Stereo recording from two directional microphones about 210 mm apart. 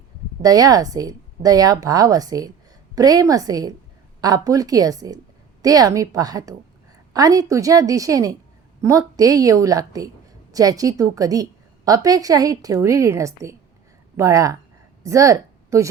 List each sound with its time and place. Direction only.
0.4 s a woman's voice: 15° right (ahead or behind)